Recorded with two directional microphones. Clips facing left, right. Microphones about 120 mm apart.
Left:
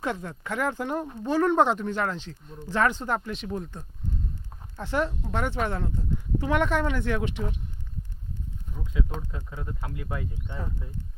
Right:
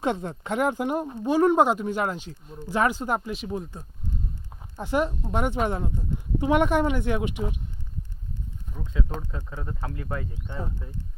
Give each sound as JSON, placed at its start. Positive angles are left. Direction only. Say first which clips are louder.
{"t": 0.0, "sound": "speech", "louder": "right 4 dB", "side_deg": -25}
{"t": 9.3, "sound": "speech", "louder": "right 2 dB", "side_deg": -35}
{"t": 9.9, "sound": "speech", "louder": "right 2 dB", "side_deg": 10}